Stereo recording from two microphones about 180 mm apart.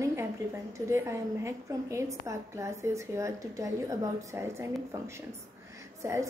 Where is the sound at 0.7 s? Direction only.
15° right (ahead or behind).